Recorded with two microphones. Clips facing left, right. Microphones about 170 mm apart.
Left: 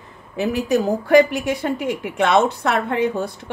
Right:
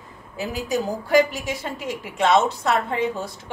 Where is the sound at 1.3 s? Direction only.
60° left (ahead or behind).